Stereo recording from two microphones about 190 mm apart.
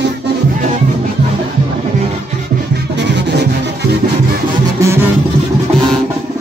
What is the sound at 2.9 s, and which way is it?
Music, 65° right (ahead or behind).